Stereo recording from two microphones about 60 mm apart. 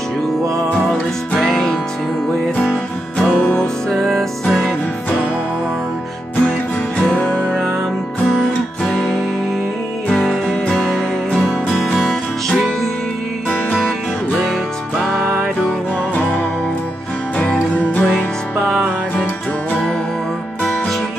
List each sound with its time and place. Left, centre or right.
1.3 s music: centre
3.3 s music: centre
7.0 s music: centre
8.4 s guitar: centre
10.0 s music: centre
15.0 s music: centre
16.2 s music: left
17.4 s music: left